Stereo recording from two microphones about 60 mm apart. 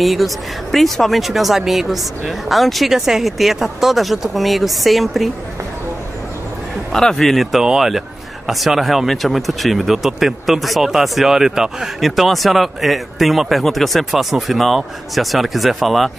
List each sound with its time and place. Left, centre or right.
0.0 s speech: centre
6.9 s speech: centre